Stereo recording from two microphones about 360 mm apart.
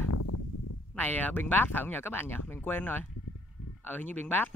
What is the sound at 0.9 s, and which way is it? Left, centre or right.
Speech, centre.